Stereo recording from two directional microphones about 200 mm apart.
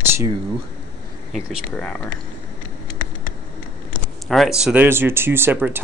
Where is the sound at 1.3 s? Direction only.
5° right (ahead or behind).